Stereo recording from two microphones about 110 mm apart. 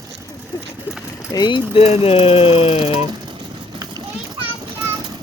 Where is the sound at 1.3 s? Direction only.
45° left (ahead or behind).